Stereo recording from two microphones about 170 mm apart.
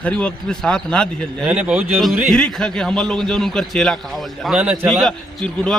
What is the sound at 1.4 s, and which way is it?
Speech, 10° right (ahead or behind).